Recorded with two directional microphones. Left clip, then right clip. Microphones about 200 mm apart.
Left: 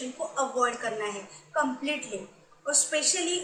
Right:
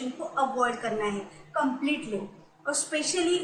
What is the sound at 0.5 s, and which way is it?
Speech, 15° left (ahead or behind).